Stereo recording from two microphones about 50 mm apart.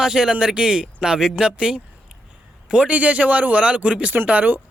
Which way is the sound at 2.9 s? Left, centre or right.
Right.